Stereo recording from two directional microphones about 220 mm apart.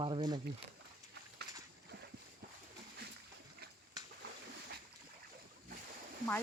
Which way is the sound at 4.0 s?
15° right (ahead or behind).